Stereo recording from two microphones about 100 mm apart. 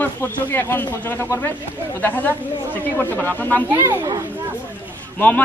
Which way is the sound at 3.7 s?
30° right (ahead or behind).